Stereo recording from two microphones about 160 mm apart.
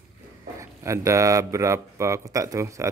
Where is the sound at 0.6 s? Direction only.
20° right (ahead or behind).